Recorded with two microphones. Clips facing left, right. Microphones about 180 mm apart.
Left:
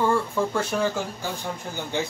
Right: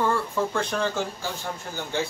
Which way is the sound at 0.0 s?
10° left (ahead or behind).